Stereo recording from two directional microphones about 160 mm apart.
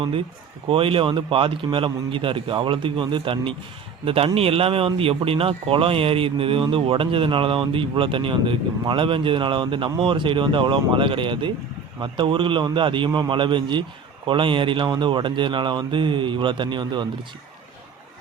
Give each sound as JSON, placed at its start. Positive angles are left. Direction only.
{"t": 0.7, "sound": "speech", "side_deg": -35}